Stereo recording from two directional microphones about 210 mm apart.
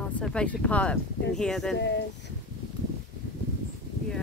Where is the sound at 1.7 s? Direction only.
55° left (ahead or behind).